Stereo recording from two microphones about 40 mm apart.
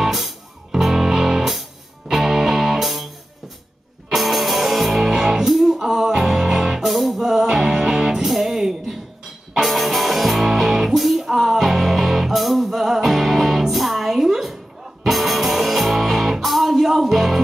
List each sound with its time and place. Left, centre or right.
0.0 s music: centre
4.1 s music: centre
7.2 s music: centre